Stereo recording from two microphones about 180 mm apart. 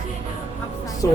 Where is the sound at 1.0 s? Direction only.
15° left (ahead or behind).